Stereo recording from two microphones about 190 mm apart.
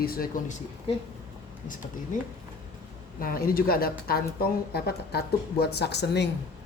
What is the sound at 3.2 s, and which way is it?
Speech, 50° left (ahead or behind).